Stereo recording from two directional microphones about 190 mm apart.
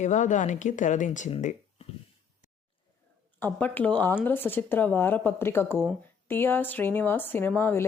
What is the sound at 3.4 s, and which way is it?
A woman's voice, 10° left (ahead or behind).